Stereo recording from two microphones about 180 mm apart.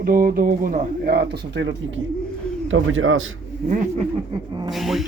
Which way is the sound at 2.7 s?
90° right.